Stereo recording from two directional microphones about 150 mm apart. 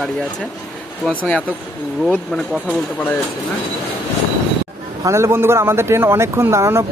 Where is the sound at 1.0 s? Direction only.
10° left (ahead or behind).